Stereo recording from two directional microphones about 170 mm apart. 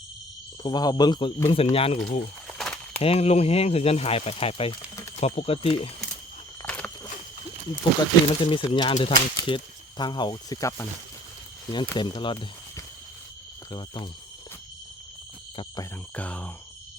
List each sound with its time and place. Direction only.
0.6 s speech: 25° left (ahead or behind)
1.7 s speech: 35° left (ahead or behind)
2.6 s a sound: 5° left (ahead or behind)
3.0 s speech: 35° left (ahead or behind)
6.7 s walk: 5° left (ahead or behind)
8.4 s speech: 30° left (ahead or behind)
15.5 s speech: 25° left (ahead or behind)
16.1 s speech: 10° left (ahead or behind)